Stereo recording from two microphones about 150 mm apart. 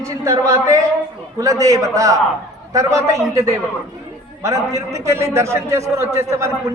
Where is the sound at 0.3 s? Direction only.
20° right (ahead or behind).